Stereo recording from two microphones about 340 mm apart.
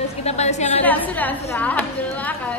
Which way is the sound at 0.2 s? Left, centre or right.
Centre.